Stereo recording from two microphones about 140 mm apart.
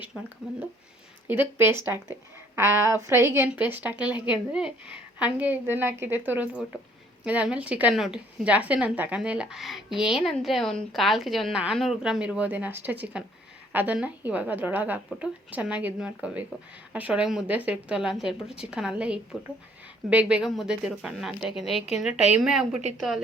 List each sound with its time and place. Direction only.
1.3 s a woman's voice: 15° right (ahead or behind)